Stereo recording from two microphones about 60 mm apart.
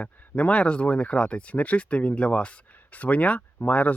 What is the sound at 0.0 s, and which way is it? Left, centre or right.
Speech, left.